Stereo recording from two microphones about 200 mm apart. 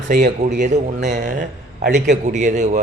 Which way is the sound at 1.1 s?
50° right (ahead or behind).